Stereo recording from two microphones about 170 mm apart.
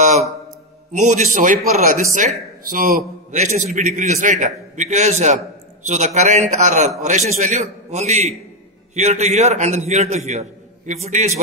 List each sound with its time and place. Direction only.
0.9 s a man's voice: 45° right (ahead or behind)